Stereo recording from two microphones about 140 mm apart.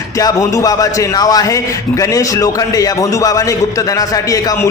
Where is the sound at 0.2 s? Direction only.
25° left (ahead or behind).